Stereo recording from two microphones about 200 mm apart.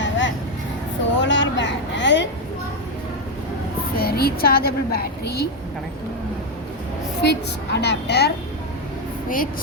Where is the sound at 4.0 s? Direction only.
50° left (ahead or behind).